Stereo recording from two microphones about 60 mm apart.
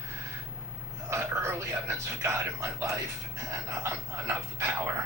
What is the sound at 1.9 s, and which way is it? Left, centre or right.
Speech, right.